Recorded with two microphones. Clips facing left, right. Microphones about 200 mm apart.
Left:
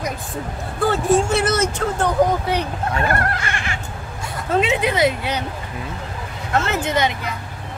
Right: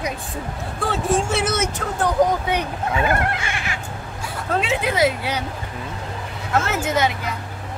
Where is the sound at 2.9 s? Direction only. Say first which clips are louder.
Right 1 dB; 5° right (ahead or behind).